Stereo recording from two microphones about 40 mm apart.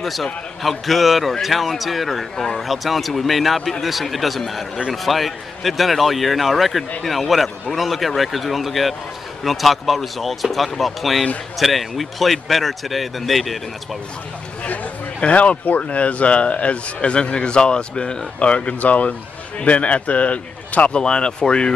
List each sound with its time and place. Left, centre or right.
0.0 s speech: centre
2.3 s speech: centre
2.6 s speech: centre
14.6 s speech: left
21.0 s speech: left